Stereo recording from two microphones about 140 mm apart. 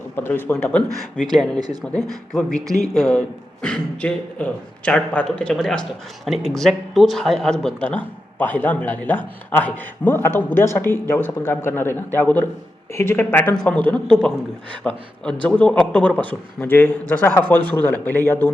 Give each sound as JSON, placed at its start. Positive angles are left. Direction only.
{"t": 0.2, "sound": "speech", "side_deg": 15}
{"t": 1.5, "sound": "speech", "side_deg": -30}
{"t": 2.0, "sound": "speech", "side_deg": 0}
{"t": 2.6, "sound": "speech", "side_deg": -25}
{"t": 2.9, "sound": "speech", "side_deg": 0}